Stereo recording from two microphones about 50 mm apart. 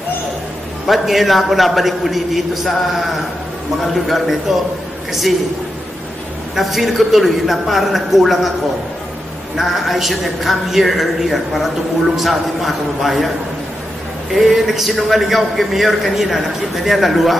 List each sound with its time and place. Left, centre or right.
0.8 s a man's voice: centre
6.5 s a man's voice: centre
9.6 s a man's voice: centre
14.3 s a man's voice: centre